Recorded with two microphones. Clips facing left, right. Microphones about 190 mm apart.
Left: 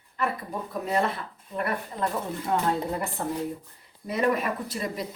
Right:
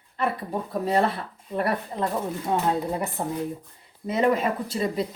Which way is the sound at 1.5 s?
30° right (ahead or behind).